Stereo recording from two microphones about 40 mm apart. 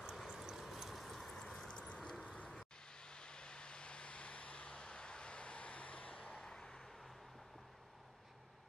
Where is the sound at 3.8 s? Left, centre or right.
Left.